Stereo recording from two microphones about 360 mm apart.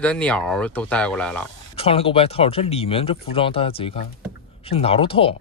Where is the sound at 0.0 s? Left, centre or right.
Centre.